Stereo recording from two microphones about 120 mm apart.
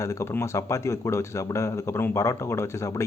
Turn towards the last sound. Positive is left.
turn(degrees=25)  # may be behind; listen again after turning